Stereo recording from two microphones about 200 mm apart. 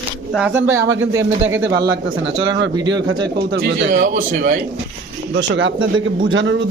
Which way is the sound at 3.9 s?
40° right (ahead or behind).